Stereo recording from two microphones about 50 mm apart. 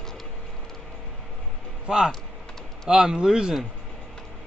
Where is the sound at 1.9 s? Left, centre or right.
Centre.